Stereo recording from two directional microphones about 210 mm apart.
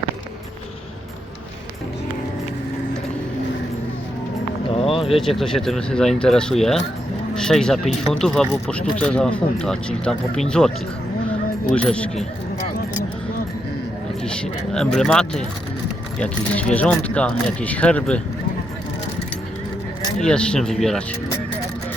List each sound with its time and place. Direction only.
4.7 s a sound: 25° left (ahead or behind)
5.1 s speech: centre (ahead or behind)
11.7 s speech: 5° left (ahead or behind)
14.3 s speech: 5° left (ahead or behind)
20.1 s speech: 5° left (ahead or behind)